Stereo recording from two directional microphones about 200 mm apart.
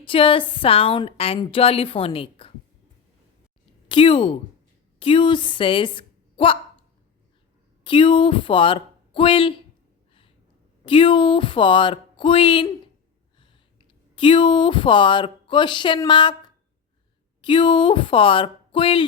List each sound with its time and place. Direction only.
0.0 s a woman's voice: 25° left (ahead or behind)
3.8 s a woman's voice: 25° left (ahead or behind)
7.9 s speech: 25° left (ahead or behind)
10.8 s a woman's voice: 25° left (ahead or behind)
14.2 s a woman's voice: 25° left (ahead or behind)